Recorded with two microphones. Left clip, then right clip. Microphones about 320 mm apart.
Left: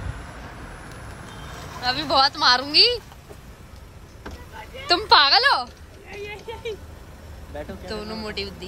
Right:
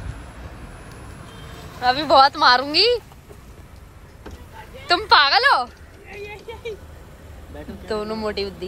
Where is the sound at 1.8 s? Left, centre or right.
Centre.